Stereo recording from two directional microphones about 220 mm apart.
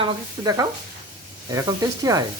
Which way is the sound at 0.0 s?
15° right (ahead or behind).